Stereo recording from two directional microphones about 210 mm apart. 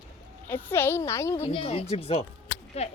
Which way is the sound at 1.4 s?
25° left (ahead or behind).